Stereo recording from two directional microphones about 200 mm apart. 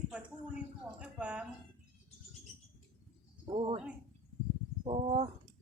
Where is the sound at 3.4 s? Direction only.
25° right (ahead or behind).